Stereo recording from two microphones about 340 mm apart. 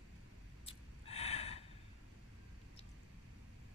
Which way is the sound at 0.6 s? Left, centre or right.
Centre.